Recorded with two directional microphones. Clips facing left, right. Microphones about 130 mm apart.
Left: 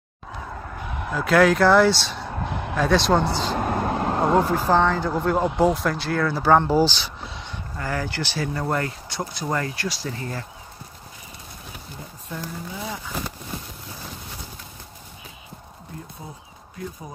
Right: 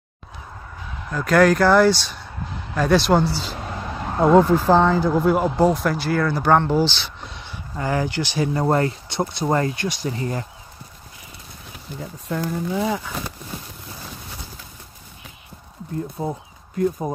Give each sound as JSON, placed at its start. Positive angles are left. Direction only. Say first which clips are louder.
{"t": 0.7, "sound": "fowl", "louder": "left 3 dB", "side_deg": 60}
{"t": 1.1, "sound": "speech", "louder": "right 2 dB", "side_deg": 0}
{"t": 2.2, "sound": "a sound", "louder": "left 5 dB", "side_deg": 65}
{"t": 2.7, "sound": "speech", "louder": "right 2 dB", "side_deg": 0}
{"t": 3.5, "sound": "vehicle", "louder": "left 7 dB", "side_deg": 55}
{"t": 4.4, "sound": "speech", "louder": "right 5 dB", "side_deg": 10}
{"t": 4.6, "sound": "speech", "louder": "right 3 dB", "side_deg": -10}
{"t": 5.5, "sound": "speech", "louder": "right 2 dB", "side_deg": 0}
{"t": 6.8, "sound": "speech", "louder": "left 1 dB", "side_deg": 40}
{"t": 7.2, "sound": "a sound", "louder": "left 1 dB", "side_deg": 0}
{"t": 7.7, "sound": "speech", "louder": "right 5 dB", "side_deg": -20}
{"t": 8.6, "sound": "speech", "louder": "right 6 dB", "side_deg": -30}
{"t": 12.3, "sound": "speech", "louder": "right 9 dB", "side_deg": -80}
{"t": 16.2, "sound": "speech", "louder": "right 12 dB", "side_deg": -55}